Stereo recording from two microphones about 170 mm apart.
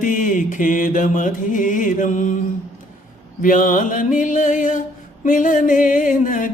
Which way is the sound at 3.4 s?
50° left (ahead or behind).